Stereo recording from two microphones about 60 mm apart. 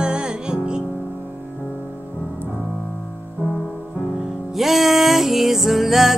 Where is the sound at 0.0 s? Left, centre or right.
Centre.